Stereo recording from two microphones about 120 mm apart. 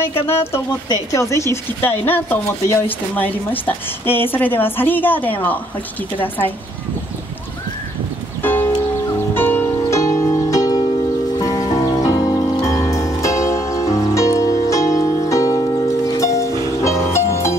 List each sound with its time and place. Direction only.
0.3 s a woman's voice: 20° left (ahead or behind)
8.4 s music: 20° left (ahead or behind)